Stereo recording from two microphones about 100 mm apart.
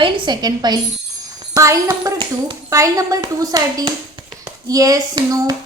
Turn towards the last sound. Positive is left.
turn(degrees=-40)  # may be behind; listen again after turning